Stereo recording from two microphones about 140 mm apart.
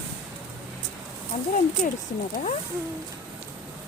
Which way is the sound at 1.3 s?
60° left (ahead or behind).